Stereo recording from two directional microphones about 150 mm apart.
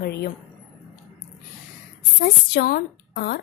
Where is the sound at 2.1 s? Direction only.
90° left.